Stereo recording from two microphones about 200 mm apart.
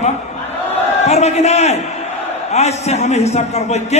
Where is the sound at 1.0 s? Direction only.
35° left (ahead or behind).